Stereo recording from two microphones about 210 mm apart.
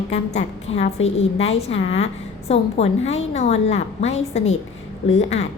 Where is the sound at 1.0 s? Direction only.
30° left (ahead or behind).